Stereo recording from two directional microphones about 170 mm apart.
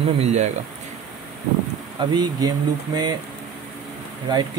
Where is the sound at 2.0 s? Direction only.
25° right (ahead or behind).